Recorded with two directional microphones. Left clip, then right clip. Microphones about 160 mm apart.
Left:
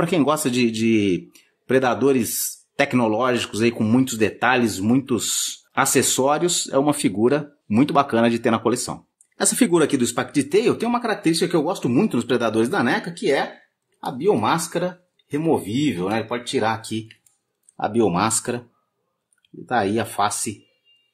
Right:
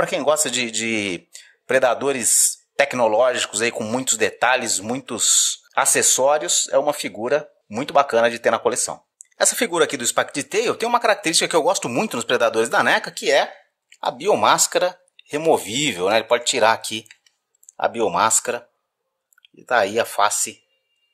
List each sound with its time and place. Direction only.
0.0 s speech: 15° right (ahead or behind); by 17.0 s 50° right (ahead or behind)
17.7 s speech: 35° right (ahead or behind)